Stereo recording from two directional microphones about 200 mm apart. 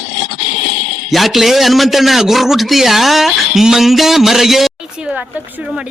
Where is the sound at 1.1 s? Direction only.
Centre (ahead or behind).